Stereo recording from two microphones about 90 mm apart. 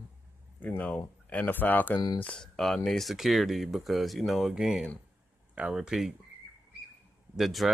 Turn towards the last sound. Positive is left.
turn(degrees=-5)  # may be behind; listen again after turning